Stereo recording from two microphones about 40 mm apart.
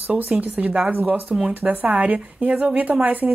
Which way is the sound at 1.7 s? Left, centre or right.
Right.